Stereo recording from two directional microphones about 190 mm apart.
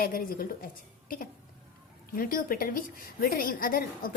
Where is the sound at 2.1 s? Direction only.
50° left (ahead or behind).